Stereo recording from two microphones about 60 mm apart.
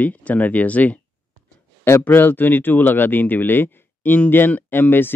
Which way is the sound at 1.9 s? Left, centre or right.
Left.